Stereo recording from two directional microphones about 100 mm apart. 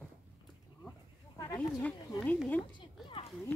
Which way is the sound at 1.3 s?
45° left (ahead or behind).